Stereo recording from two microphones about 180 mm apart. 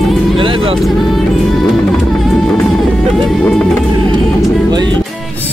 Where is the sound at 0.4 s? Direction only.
30° right (ahead or behind).